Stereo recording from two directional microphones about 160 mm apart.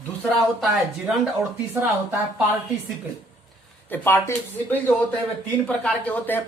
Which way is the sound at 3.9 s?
15° left (ahead or behind).